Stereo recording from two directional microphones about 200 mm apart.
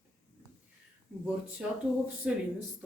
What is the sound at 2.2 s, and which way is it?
Speech, 5° right (ahead or behind).